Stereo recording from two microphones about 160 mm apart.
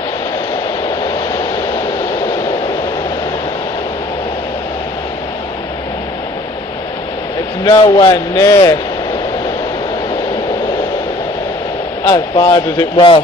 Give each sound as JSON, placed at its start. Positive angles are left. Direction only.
{"t": 0.8, "sound": "vehicle", "side_deg": 25}
{"t": 7.6, "sound": "speech", "side_deg": 30}
{"t": 12.0, "sound": "speech", "side_deg": 25}